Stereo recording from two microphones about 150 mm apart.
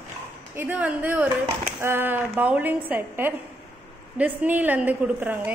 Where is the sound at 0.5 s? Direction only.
10° right (ahead or behind).